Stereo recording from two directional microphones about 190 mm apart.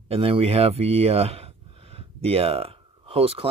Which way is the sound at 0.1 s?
30° right (ahead or behind).